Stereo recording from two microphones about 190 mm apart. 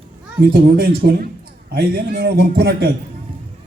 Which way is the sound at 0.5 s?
55° right (ahead or behind).